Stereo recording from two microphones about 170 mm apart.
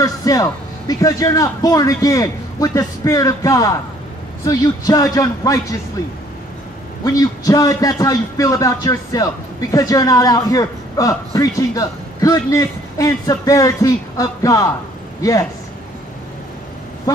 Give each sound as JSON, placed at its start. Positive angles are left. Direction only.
{"t": 0.0, "sound": "a man's voice", "side_deg": 20}
{"t": 7.1, "sound": "a man's voice", "side_deg": 20}